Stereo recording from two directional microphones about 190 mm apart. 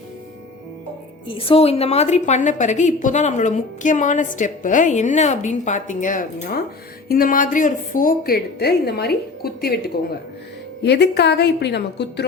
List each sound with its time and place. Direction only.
1.3 s a woman's voice: 30° left (ahead or behind); by 9.8 s 55° left (ahead or behind)
10.8 s a woman's voice: 60° left (ahead or behind)